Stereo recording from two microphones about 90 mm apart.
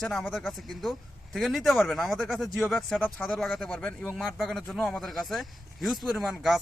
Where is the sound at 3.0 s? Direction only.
20° left (ahead or behind).